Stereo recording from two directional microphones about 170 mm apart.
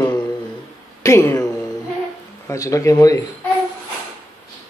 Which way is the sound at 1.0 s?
15° left (ahead or behind).